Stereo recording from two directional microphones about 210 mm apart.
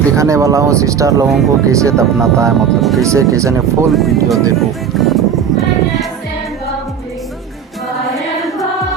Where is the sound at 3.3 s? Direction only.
15° right (ahead or behind).